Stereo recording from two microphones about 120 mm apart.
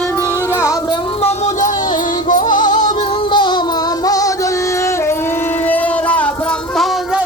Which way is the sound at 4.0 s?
30° left (ahead or behind).